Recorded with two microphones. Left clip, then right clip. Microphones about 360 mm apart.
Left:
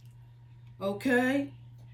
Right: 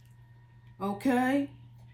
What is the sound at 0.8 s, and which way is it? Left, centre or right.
Speech, centre.